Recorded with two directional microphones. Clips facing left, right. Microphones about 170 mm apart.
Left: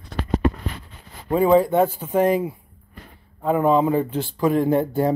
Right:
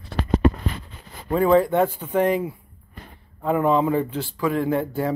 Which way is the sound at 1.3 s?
15° left (ahead or behind).